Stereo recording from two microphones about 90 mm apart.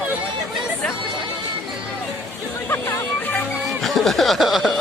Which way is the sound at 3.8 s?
Centre (ahead or behind).